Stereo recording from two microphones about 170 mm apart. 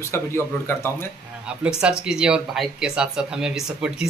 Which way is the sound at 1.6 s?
5° right (ahead or behind).